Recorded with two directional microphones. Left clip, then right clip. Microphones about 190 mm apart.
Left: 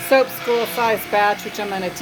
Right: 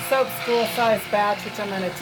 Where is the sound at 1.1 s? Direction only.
40° left (ahead or behind).